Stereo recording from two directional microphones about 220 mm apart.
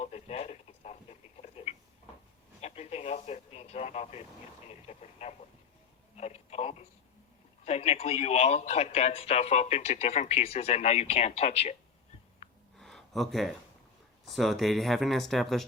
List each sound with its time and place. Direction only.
0.0 s a sound: 30° left (ahead or behind)
4.7 s radio: 30° left (ahead or behind)
6.1 s telephone: 30° left (ahead or behind)
7.6 s speech: 30° left (ahead or behind)
12.7 s a sound: centre (ahead or behind)
14.3 s speech: centre (ahead or behind)